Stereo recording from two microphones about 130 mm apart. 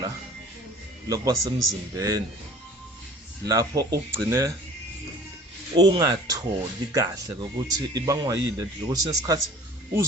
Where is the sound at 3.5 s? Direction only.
30° right (ahead or behind).